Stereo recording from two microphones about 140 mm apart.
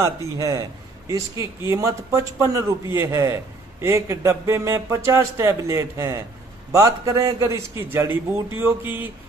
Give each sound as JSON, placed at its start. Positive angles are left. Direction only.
{"t": 0.0, "sound": "a man's voice", "side_deg": -20}